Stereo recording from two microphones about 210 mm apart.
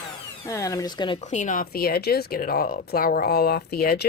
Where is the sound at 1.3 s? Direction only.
35° left (ahead or behind).